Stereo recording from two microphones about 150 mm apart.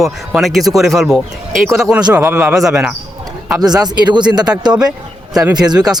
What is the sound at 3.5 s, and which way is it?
Speech, 25° right (ahead or behind).